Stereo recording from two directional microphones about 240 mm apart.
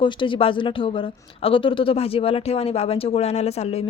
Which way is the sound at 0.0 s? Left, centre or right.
Left.